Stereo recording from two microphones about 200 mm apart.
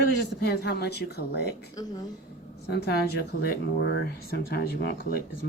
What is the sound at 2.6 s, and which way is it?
Speech, 55° left (ahead or behind).